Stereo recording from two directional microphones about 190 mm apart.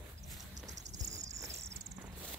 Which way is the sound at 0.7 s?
35° right (ahead or behind).